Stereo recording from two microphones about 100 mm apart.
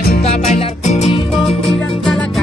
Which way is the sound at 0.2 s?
90° left.